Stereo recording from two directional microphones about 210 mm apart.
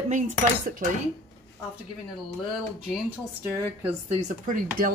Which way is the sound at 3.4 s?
15° right (ahead or behind).